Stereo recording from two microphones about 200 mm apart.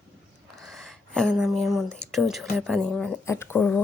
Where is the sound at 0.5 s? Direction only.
Centre (ahead or behind).